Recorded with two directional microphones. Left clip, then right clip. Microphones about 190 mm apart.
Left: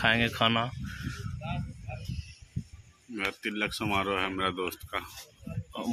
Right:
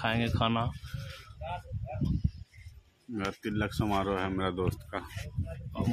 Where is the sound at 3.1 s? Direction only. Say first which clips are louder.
Left 2 dB; 20° right (ahead or behind).